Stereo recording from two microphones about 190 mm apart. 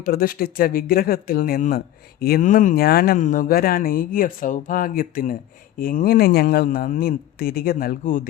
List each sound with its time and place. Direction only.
0.0 s speech: 50° left (ahead or behind)